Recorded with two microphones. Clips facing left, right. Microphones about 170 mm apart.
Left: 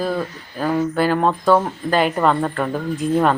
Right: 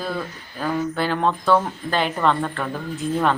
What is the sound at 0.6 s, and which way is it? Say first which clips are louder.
Speech: left 5 dB; 35° left (ahead or behind).